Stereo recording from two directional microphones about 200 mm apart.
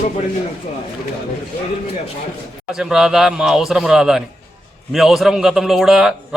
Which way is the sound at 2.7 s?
Centre (ahead or behind).